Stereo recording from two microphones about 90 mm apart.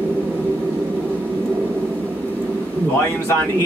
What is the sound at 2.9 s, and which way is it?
Speech, 25° left (ahead or behind).